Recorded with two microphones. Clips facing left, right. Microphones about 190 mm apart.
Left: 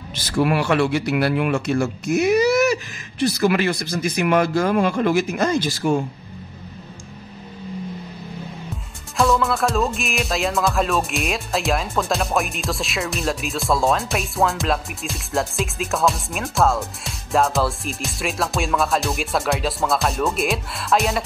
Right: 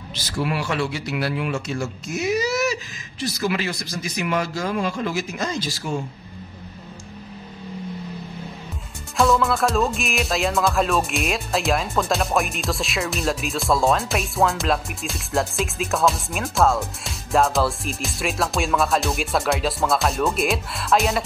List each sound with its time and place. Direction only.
0.1 s speech: 55° left (ahead or behind)
9.1 s music: centre (ahead or behind)